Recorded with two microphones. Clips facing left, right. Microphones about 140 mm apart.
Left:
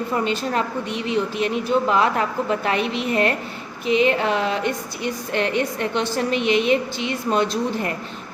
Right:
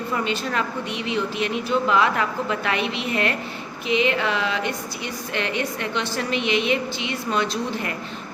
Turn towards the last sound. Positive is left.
turn(degrees=45)  # may be behind; listen again after turning